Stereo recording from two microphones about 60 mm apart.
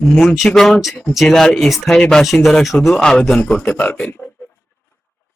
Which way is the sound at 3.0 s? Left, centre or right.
Centre.